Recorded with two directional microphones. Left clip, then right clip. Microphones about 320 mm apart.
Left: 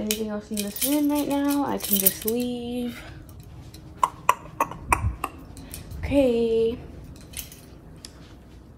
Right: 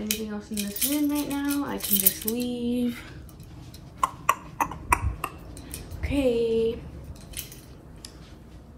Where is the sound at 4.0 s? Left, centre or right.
Centre.